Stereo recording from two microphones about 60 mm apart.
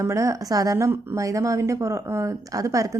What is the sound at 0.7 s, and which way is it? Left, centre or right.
Speech, right.